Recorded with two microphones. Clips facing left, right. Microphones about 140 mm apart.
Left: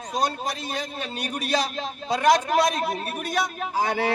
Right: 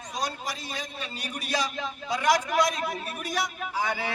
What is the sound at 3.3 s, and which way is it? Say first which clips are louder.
Speech: left 4 dB; 60° left (ahead or behind).